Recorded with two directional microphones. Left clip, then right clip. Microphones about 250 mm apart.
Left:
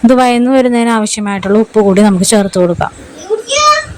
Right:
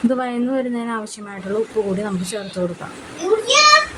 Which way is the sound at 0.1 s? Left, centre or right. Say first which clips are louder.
Left 13 dB; left.